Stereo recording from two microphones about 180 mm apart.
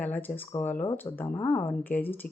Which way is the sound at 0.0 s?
10° left (ahead or behind).